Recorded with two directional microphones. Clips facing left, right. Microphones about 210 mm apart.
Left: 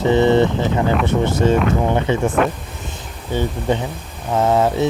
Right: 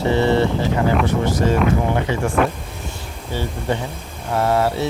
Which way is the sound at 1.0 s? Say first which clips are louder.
Left 2 dB; 25° left (ahead or behind).